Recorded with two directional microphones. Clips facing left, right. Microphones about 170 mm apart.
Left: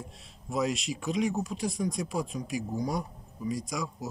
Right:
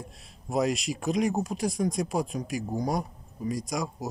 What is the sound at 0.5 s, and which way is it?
A man's voice, 60° right (ahead or behind).